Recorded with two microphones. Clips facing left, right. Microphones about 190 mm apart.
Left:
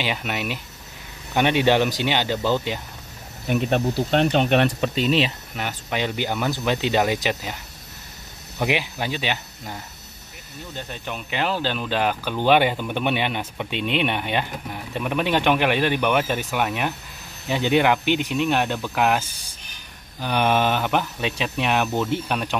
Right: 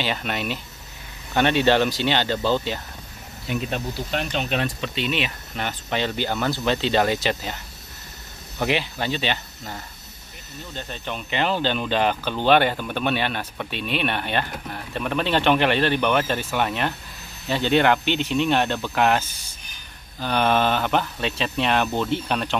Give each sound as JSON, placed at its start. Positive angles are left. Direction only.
{"t": 0.0, "sound": "speech", "side_deg": 10}
{"t": 3.4, "sound": "speech", "side_deg": 60}
{"t": 4.9, "sound": "speech", "side_deg": 35}
{"t": 5.5, "sound": "speech", "side_deg": 10}
{"t": 8.5, "sound": "speech", "side_deg": 10}